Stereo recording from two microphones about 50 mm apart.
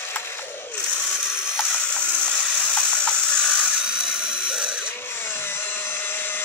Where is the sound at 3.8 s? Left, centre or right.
Centre.